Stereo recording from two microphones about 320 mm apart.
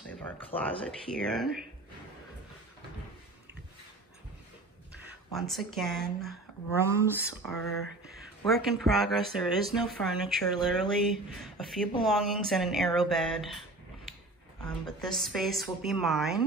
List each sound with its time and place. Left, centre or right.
0.5 s speech: centre
0.8 s speech: centre
4.9 s speech: centre
8.6 s speech: centre
14.6 s speech: centre